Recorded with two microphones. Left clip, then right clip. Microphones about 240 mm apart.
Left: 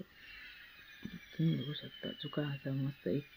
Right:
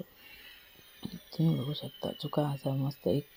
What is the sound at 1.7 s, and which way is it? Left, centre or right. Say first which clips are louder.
Speech: right 6 dB; centre.